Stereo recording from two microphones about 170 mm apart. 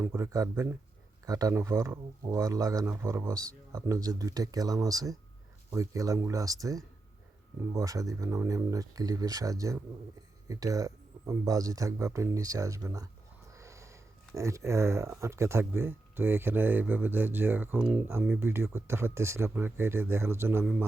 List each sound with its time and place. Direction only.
0.0 s speech: 15° right (ahead or behind)